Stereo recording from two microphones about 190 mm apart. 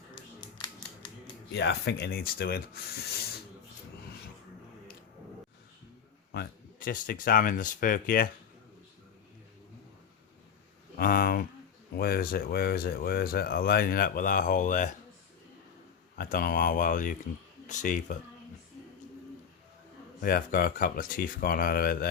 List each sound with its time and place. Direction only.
1.5 s speech: 65° left (ahead or behind)
6.3 s speech: 55° left (ahead or behind)
10.9 s speech: 50° left (ahead or behind)
16.1 s speech: 50° left (ahead or behind)
20.2 s speech: 50° left (ahead or behind)